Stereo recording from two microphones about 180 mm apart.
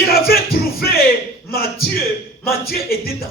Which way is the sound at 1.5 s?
55° left (ahead or behind).